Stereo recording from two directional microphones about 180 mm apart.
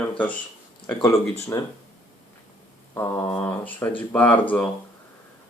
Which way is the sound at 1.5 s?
15° left (ahead or behind).